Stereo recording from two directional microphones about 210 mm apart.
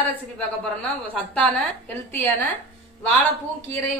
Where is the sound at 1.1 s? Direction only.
5° left (ahead or behind).